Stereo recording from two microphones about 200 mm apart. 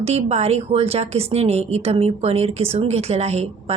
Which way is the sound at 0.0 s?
30° right (ahead or behind).